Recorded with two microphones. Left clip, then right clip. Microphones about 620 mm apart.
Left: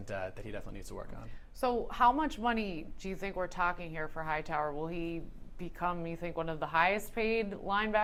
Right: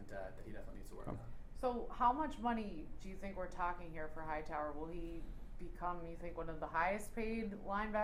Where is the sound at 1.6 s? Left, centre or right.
Left.